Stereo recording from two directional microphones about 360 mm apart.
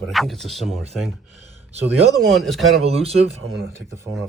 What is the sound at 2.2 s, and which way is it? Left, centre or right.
Speech, centre.